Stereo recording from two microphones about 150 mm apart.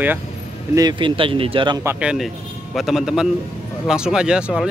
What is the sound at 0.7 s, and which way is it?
Speech, 30° right (ahead or behind).